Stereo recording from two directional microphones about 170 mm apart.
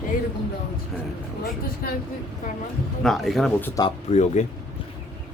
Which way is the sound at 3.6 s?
20° left (ahead or behind).